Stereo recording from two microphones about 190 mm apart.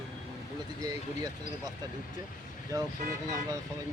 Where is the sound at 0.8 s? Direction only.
20° right (ahead or behind).